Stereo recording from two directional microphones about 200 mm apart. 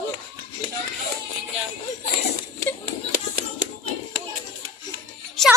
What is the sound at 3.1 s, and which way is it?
Music, 50° right (ahead or behind).